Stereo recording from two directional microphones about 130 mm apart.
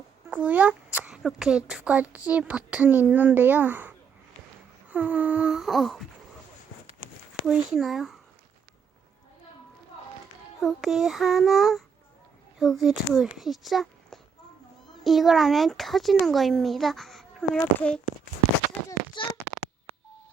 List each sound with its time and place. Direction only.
0.3 s a child's voice: 10° right (ahead or behind)
7.4 s speech: centre (ahead or behind)
10.6 s speech: centre (ahead or behind)
19.1 s a sound: 40° left (ahead or behind)